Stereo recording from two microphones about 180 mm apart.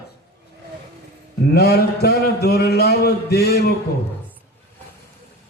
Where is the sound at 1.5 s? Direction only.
60° left (ahead or behind).